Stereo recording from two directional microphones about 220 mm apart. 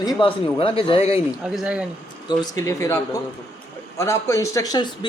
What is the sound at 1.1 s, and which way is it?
Speech, 5° right (ahead or behind).